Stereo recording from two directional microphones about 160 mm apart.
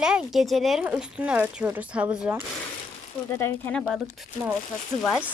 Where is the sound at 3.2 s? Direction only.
15° left (ahead or behind).